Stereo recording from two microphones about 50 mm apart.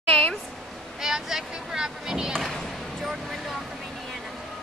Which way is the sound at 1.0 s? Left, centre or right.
Centre.